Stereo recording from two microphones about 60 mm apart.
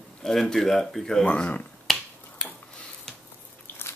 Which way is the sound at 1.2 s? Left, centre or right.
Left.